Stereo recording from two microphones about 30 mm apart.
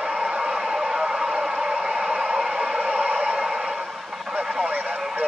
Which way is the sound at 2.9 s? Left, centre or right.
Right.